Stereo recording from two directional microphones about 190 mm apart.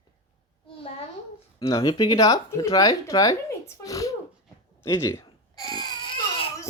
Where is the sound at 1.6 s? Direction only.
15° left (ahead or behind).